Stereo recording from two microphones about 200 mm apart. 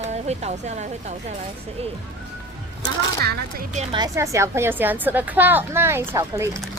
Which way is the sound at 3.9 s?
20° right (ahead or behind).